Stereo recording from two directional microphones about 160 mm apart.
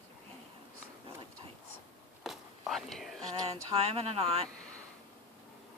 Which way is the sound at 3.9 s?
40° right (ahead or behind).